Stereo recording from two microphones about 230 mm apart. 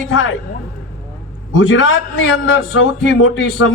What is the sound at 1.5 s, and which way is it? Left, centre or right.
A man's voice, left.